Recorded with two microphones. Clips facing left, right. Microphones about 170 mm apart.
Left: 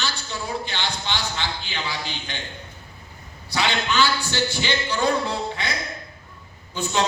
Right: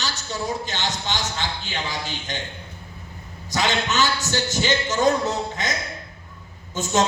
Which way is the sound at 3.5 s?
45° right (ahead or behind).